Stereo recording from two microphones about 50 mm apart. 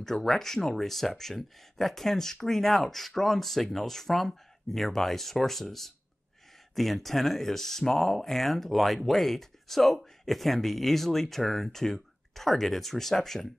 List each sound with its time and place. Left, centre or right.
0.0 s speech: centre